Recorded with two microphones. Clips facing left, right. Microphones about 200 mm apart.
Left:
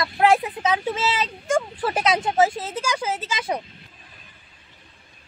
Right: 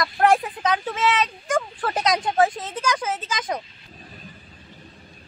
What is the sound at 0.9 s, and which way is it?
Speech, 25° left (ahead or behind).